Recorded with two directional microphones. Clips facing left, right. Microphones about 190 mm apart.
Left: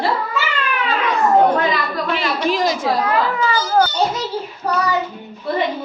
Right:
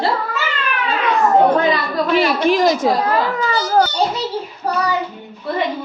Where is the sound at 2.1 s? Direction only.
45° right (ahead or behind).